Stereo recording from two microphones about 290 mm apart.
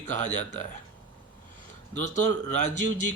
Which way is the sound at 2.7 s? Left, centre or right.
Right.